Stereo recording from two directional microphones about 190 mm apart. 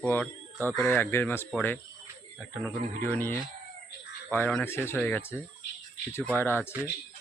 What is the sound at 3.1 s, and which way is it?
Speech, 10° left (ahead or behind).